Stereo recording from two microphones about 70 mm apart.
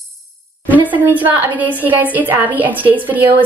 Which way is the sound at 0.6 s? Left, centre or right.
Right.